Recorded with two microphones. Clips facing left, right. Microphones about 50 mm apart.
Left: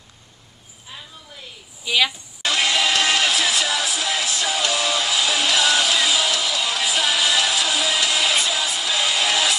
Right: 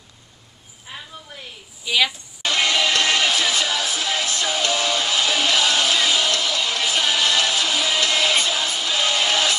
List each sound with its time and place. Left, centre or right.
0.9 s a sound: right
1.9 s speech: centre
2.4 s music: centre
4.6 s music: centre